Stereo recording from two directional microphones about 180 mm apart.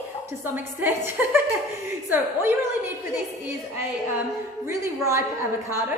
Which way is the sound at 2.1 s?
10° right (ahead or behind).